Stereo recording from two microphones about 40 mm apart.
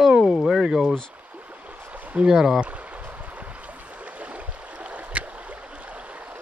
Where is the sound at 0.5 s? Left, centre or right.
Centre.